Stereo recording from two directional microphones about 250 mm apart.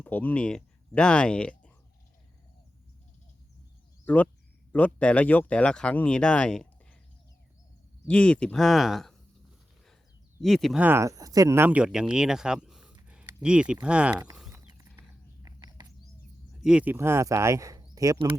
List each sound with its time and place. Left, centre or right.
0.0 s speech: centre
4.0 s speech: centre
8.0 s speech: centre
10.4 s speech: centre
14.7 s a sound: centre
16.6 s speech: centre